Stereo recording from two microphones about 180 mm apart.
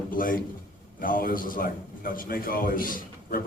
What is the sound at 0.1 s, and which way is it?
A man's voice, 50° left (ahead or behind).